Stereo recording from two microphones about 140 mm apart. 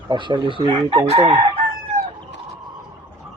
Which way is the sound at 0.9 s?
40° right (ahead or behind).